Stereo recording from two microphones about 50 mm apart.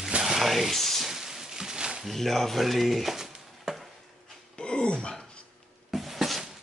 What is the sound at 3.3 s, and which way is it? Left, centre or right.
Chop, centre.